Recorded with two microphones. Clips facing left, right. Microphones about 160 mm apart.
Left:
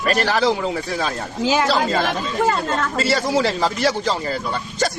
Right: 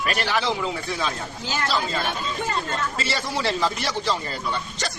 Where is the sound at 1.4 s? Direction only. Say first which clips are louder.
Left 9 dB; 90° left.